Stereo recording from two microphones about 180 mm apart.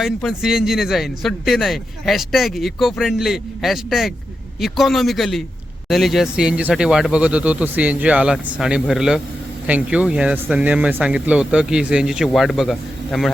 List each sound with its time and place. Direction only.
0.0 s a man's voice: centre (ahead or behind)